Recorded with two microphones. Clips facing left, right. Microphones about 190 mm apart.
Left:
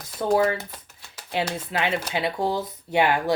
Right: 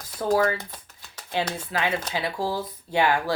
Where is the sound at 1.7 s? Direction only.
25° left (ahead or behind).